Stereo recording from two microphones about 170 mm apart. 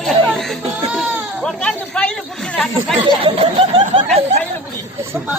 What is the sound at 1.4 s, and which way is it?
Chatter, 5° left (ahead or behind).